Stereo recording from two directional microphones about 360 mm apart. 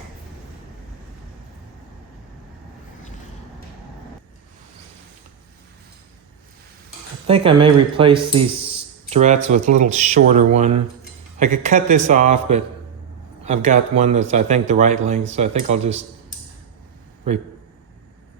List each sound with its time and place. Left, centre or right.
7.3 s speech: centre